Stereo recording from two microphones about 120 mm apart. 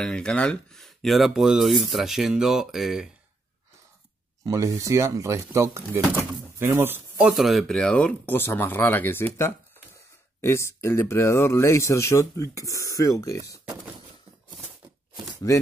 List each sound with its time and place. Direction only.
0.0 s speech: 5° left (ahead or behind)
4.5 s speech: 25° right (ahead or behind)
6.6 s speech: 20° right (ahead or behind)
7.2 s speech: centre (ahead or behind); by 13.6 s 25° left (ahead or behind)
15.4 s speech: 25° left (ahead or behind)